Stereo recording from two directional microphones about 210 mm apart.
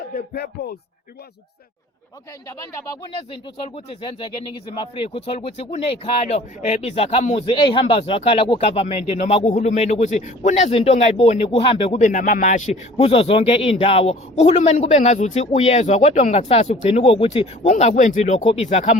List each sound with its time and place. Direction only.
0.3 s speech: 50° left (ahead or behind)
2.5 s speech: 15° left (ahead or behind); by 18.9 s 30° left (ahead or behind)